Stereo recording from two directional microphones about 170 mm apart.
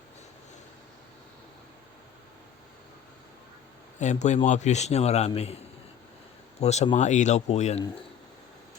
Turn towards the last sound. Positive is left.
turn(degrees=40)  # may be behind; listen again after turning